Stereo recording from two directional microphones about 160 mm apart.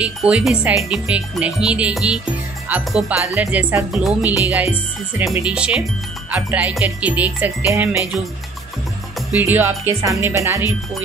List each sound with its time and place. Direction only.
0.0 s speech: 5° right (ahead or behind)
2.7 s music: 10° right (ahead or behind)
9.4 s music: 10° right (ahead or behind)